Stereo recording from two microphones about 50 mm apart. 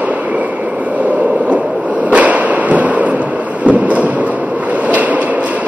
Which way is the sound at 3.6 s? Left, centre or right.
Right.